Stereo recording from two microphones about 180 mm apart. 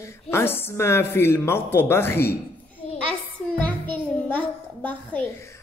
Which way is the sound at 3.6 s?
10° left (ahead or behind).